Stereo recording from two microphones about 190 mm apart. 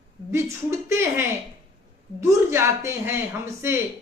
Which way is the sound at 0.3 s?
15° right (ahead or behind).